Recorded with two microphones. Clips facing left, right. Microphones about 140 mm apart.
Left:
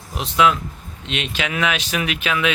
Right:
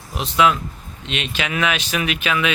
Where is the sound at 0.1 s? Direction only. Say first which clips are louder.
Even; centre (ahead or behind).